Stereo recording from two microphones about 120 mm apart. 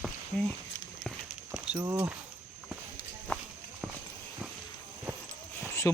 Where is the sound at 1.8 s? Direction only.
30° right (ahead or behind).